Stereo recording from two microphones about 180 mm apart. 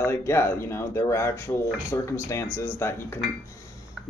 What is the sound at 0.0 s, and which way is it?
Speech, 15° left (ahead or behind).